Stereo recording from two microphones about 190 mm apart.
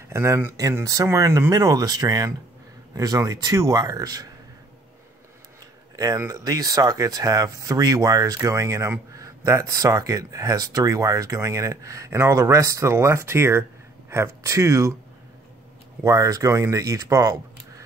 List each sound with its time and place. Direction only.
0.1 s speech: 15° right (ahead or behind)
5.9 s speech: 15° right (ahead or behind)
16.0 s speech: 15° right (ahead or behind)